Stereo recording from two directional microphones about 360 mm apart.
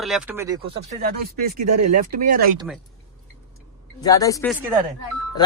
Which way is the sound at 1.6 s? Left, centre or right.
Right.